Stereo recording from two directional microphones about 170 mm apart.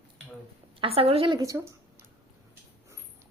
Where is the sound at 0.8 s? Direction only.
35° right (ahead or behind).